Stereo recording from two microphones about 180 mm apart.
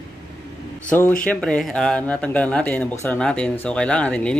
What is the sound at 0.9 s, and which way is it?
Speech, 10° left (ahead or behind).